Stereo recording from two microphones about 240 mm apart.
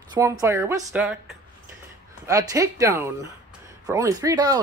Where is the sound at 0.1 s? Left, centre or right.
Centre.